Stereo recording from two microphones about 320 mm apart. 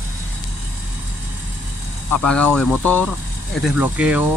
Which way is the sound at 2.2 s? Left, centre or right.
Centre.